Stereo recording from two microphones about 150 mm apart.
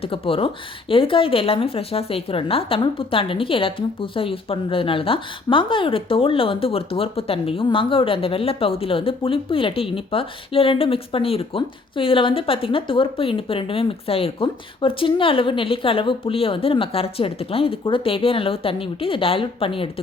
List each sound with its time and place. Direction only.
0.0 s a woman's voice: 40° left (ahead or behind)